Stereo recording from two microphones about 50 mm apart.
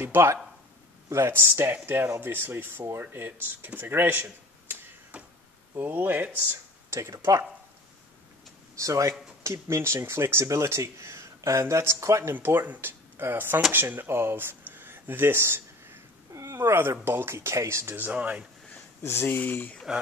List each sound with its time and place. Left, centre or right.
0.0 s speech: right
1.0 s a sound: right
1.3 s speech: right
5.1 s a sound: right
5.8 s speech: right
6.9 s speech: right
8.7 s speech: right
9.4 s speech: right
12.3 s speech: right
14.0 s a sound: right
16.5 s speech: right
17.8 s speech: right
19.2 s speech: left
19.9 s speech: centre